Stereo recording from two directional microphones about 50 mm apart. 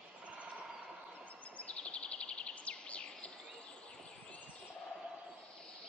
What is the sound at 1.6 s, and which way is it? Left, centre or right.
Bird vocalization, left.